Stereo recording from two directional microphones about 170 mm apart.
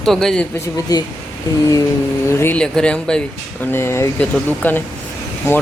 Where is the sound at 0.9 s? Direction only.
20° left (ahead or behind).